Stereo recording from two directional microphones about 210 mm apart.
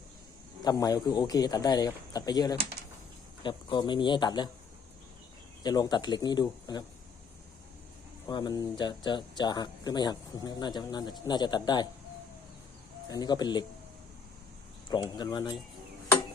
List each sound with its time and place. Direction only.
0.6 s speech: 20° left (ahead or behind)
5.6 s speech: 20° left (ahead or behind)
8.3 s speech: 20° left (ahead or behind)
13.1 s speech: 20° left (ahead or behind)
14.8 s speech: 20° left (ahead or behind)